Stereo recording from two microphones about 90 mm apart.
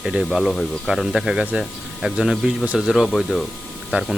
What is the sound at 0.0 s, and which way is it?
Speech, 10° right (ahead or behind).